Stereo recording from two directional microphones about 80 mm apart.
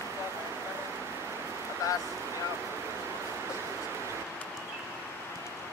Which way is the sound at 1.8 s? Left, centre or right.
Left.